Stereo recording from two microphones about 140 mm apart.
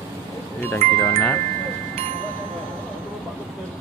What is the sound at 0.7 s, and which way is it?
Speech, 20° left (ahead or behind).